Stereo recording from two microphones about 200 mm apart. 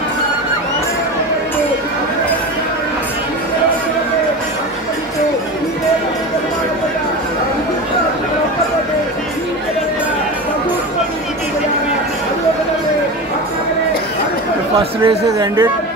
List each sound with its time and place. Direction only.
15.0 s speech: 15° right (ahead or behind)